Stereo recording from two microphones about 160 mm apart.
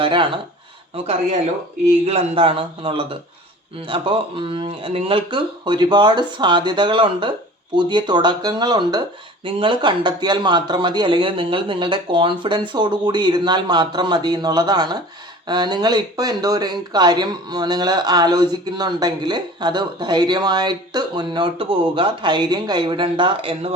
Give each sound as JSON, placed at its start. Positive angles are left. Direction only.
{"t": 0.0, "sound": "speech", "side_deg": -30}
{"t": 2.0, "sound": "speech", "side_deg": -35}